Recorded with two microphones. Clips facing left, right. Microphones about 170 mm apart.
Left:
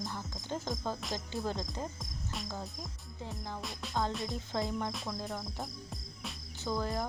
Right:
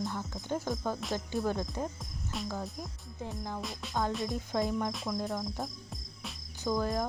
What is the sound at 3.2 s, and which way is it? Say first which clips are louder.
Music: right 4 dB; 15° right (ahead or behind).